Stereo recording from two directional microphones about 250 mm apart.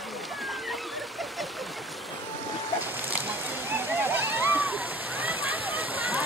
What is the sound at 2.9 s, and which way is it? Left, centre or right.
Slosh, centre.